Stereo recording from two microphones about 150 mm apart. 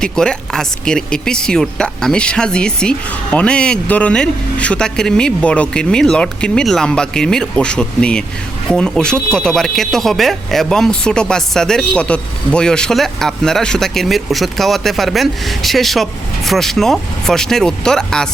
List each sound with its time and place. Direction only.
0.0 s speech: 5° left (ahead or behind)